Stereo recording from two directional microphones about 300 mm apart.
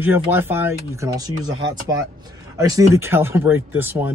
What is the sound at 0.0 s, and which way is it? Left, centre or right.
Speech, centre.